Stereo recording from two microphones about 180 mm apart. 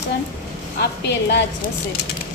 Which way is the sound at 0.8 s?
65° left (ahead or behind).